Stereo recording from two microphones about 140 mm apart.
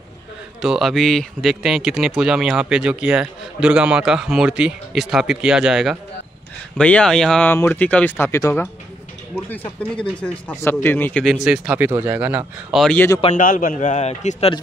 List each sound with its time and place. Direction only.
0.6 s speech: 5° right (ahead or behind)
6.8 s speech: 10° left (ahead or behind)
9.8 s speech: 10° left (ahead or behind)
11.2 s speech: 5° right (ahead or behind)
12.9 s speech: 15° left (ahead or behind)
13.3 s a man's voice: 75° left (ahead or behind); by 14.5 s 50° left (ahead or behind)